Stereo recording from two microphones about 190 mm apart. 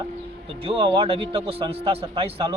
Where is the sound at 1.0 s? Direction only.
30° right (ahead or behind).